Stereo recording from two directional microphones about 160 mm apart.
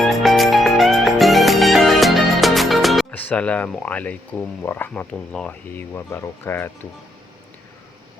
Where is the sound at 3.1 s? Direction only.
10° left (ahead or behind).